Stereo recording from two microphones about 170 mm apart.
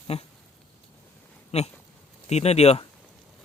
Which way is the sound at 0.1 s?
35° left (ahead or behind).